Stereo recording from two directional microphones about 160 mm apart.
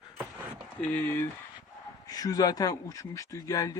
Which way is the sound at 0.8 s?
10° left (ahead or behind).